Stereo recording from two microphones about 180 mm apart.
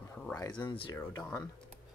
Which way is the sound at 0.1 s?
5° left (ahead or behind).